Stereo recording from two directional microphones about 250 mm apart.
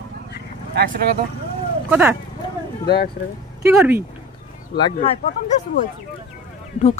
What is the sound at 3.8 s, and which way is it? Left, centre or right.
Speech, centre.